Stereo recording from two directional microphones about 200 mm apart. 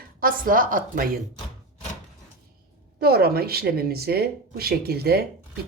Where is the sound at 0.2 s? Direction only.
45° right (ahead or behind).